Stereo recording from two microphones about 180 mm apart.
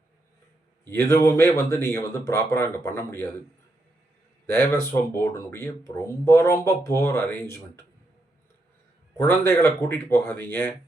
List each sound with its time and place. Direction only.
1.0 s speech: 15° left (ahead or behind)
4.5 s speech: 15° left (ahead or behind)
9.1 s speech: 15° left (ahead or behind)